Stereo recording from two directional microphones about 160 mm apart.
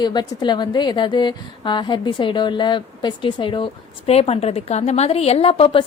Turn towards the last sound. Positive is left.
turn(degrees=35)  # may be behind; listen again after turning